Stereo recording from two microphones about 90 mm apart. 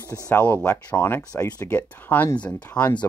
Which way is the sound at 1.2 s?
40° left (ahead or behind).